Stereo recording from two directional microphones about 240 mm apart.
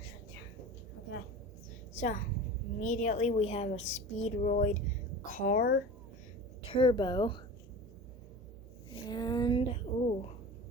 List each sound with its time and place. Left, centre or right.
2.0 s a woman's voice: left
6.6 s a woman's voice: left
9.0 s a sound: centre